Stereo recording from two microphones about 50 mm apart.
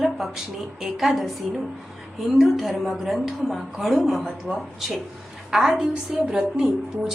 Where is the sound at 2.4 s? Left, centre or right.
Centre.